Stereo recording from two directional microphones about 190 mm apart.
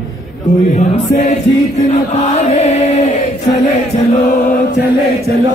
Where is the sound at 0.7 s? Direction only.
35° left (ahead or behind).